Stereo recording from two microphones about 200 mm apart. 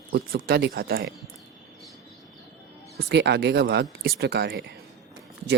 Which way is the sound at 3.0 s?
60° right (ahead or behind).